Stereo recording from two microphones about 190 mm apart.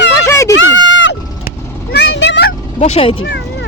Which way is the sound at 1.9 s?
65° left (ahead or behind).